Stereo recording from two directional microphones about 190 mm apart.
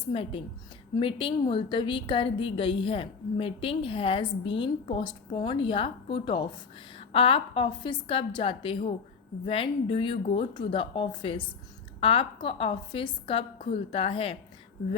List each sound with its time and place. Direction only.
0.1 s a woman's voice: 30° left (ahead or behind)